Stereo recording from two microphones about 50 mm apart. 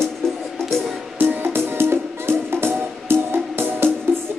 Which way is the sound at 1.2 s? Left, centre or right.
Right.